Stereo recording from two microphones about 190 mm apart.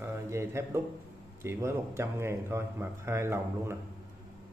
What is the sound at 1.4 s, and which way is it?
A man's voice, 15° right (ahead or behind).